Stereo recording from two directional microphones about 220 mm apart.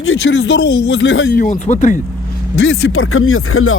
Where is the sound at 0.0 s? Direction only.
60° left (ahead or behind).